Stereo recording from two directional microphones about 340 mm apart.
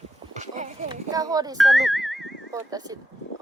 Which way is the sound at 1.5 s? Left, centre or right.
Centre.